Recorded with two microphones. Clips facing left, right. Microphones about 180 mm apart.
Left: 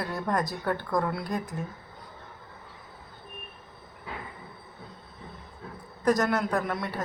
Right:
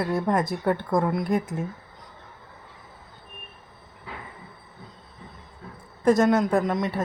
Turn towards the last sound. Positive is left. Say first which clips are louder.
# right 6 dB
turn(degrees=-20)  # may be behind; listen again after turning